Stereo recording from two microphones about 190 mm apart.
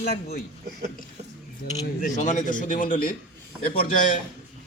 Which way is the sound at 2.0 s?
40° left (ahead or behind).